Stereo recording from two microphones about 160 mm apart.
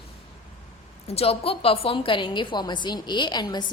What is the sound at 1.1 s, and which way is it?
A woman's voice, 40° left (ahead or behind).